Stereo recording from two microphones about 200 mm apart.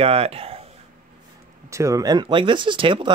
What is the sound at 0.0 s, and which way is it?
Speech, 30° right (ahead or behind).